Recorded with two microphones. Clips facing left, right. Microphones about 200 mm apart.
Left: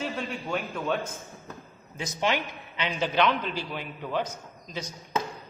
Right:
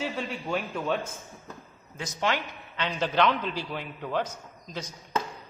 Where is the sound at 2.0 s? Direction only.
20° left (ahead or behind).